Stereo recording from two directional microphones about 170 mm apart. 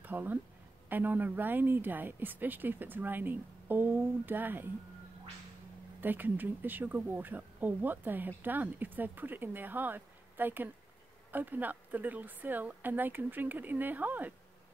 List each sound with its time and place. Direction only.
0.0 s speech: 10° right (ahead or behind)
5.9 s speech: 10° right (ahead or behind)